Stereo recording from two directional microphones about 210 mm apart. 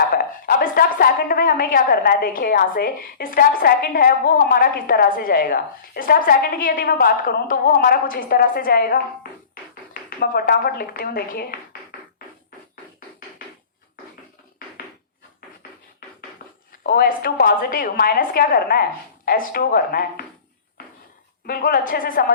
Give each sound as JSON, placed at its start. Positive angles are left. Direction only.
{"t": 0.1, "sound": "a woman's voice", "side_deg": 45}
{"t": 16.8, "sound": "a woman's voice", "side_deg": 45}
{"t": 21.4, "sound": "a woman's voice", "side_deg": 45}